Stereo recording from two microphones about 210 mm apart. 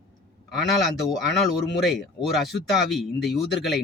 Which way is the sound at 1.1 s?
Centre (ahead or behind).